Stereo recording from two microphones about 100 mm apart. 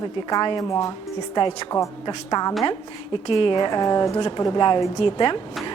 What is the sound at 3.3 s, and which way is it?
Speech, 60° left (ahead or behind).